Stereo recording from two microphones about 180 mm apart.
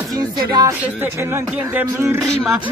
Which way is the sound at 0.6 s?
20° right (ahead or behind).